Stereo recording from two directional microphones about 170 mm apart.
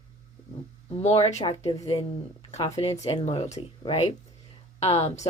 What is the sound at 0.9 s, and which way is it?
Speech, 40° left (ahead or behind).